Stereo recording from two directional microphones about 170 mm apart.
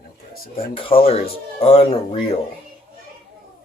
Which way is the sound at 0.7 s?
30° left (ahead or behind).